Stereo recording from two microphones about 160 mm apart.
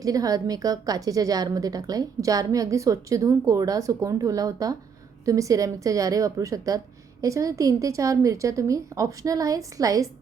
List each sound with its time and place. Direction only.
0.0 s a woman's voice: 20° right (ahead or behind)